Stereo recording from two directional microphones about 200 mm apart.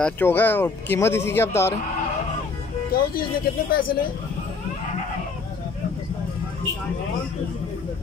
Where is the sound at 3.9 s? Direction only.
50° left (ahead or behind).